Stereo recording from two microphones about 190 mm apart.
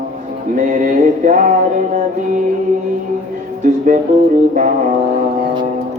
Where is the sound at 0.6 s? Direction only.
45° right (ahead or behind).